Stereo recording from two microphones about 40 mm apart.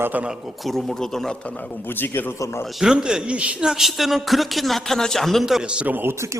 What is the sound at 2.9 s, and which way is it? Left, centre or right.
Speech, right.